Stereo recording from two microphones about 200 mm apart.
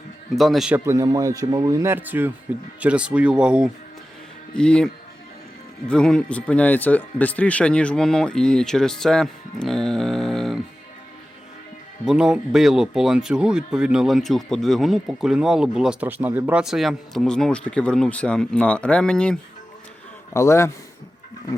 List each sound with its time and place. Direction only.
0.3 s speech: centre (ahead or behind)
0.9 s speech: 15° right (ahead or behind); by 4.9 s 5° left (ahead or behind)
5.9 s speech: 5° left (ahead or behind)
12.0 s a man's voice: 5° right (ahead or behind); by 20.7 s 15° left (ahead or behind)